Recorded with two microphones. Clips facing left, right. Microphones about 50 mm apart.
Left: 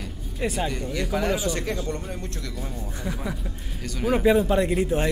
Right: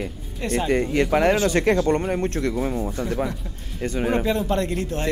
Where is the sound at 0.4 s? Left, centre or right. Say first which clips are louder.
Right 2 dB; centre.